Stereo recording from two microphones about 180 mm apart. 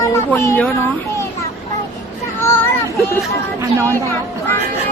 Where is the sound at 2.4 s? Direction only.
15° left (ahead or behind).